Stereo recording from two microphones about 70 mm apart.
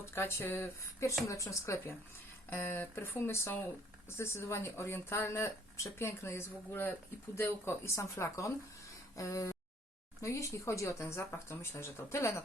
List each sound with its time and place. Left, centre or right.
0.0 s speech: left
2.5 s speech: left